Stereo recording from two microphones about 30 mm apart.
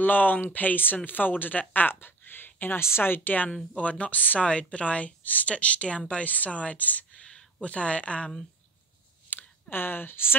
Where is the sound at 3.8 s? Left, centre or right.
Left.